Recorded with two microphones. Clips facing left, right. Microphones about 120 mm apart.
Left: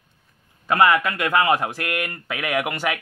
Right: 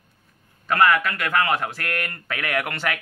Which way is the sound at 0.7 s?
20° left (ahead or behind).